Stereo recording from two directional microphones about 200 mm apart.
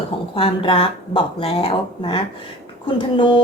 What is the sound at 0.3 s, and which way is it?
A woman's voice, 25° left (ahead or behind).